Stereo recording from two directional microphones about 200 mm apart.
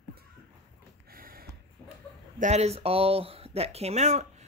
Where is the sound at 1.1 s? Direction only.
45° right (ahead or behind).